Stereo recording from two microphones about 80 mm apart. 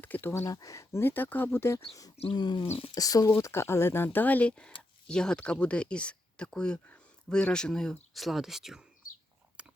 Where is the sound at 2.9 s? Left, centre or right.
Left.